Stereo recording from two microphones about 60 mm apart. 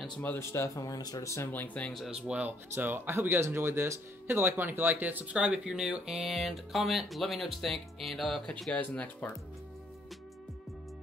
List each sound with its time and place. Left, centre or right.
0.4 s speech: left
0.7 s speech: left
1.5 s speech: left
2.0 s speech: centre
2.7 s speech: right
5.2 s speech: centre
6.0 s speech: centre
8.7 s speech: left